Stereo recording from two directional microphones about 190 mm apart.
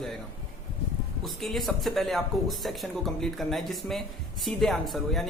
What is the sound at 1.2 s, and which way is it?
Speech, centre (ahead or behind).